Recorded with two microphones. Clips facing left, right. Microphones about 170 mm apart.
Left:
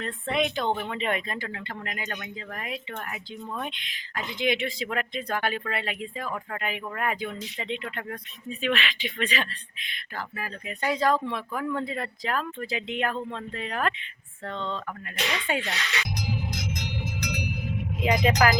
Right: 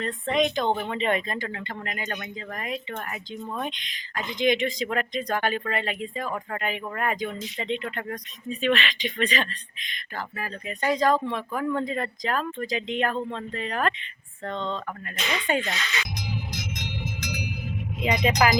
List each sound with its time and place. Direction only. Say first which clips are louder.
0.0 s speech: right 3 dB; 5° left (ahead or behind)
15.9 s music: even; 65° left (ahead or behind)
17.2 s a sound: left 3 dB; centre (ahead or behind)
18.0 s speech: left 1 dB; centre (ahead or behind)